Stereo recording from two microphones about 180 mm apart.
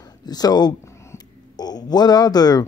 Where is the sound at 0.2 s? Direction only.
20° left (ahead or behind).